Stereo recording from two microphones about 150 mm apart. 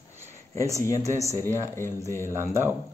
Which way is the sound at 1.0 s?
20° right (ahead or behind).